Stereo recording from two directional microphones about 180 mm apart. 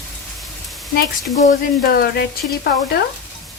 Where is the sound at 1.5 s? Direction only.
55° left (ahead or behind).